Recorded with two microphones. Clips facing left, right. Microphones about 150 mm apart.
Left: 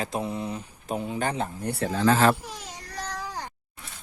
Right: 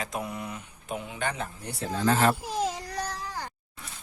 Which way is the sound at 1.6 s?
60° left (ahead or behind).